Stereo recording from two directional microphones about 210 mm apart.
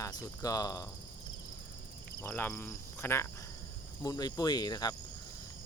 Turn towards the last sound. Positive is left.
turn(degrees=20)  # may be behind; listen again after turning